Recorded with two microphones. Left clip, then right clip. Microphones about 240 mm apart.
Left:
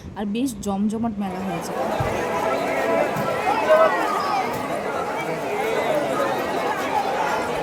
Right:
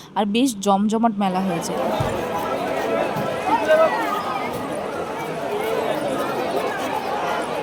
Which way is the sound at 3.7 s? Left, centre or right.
Centre.